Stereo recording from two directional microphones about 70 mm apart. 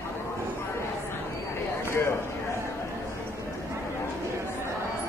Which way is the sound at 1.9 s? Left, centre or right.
Left.